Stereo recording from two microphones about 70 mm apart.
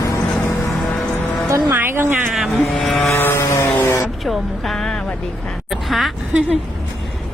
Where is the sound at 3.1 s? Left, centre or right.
Left.